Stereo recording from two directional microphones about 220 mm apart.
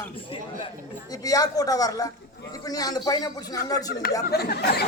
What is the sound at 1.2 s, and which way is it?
A man's voice, 15° left (ahead or behind).